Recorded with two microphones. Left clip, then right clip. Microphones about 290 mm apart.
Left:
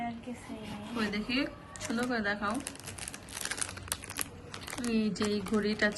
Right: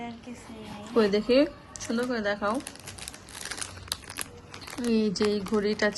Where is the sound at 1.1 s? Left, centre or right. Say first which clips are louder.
Right 11 dB; centre.